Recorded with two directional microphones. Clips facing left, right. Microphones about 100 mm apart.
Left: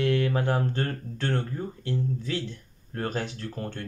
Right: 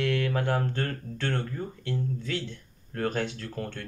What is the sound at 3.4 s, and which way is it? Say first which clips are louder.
Music: left 1 dB; 25° left (ahead or behind).